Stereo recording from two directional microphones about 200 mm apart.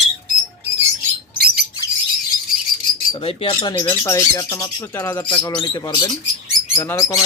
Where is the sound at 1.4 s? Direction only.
50° right (ahead or behind).